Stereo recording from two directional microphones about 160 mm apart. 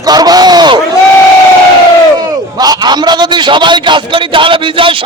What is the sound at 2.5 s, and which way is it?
A man's voice, 25° right (ahead or behind).